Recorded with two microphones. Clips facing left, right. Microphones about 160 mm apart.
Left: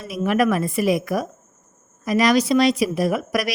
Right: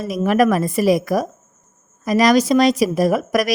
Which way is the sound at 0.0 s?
40° right (ahead or behind).